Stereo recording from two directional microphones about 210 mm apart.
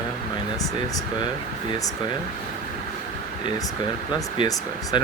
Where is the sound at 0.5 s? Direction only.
15° left (ahead or behind).